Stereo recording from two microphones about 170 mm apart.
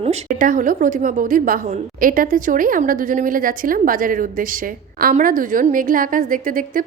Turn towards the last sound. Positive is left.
turn(degrees=-55)  # may be behind; listen again after turning